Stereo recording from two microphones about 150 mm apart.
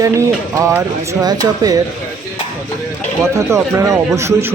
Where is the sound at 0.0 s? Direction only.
20° right (ahead or behind).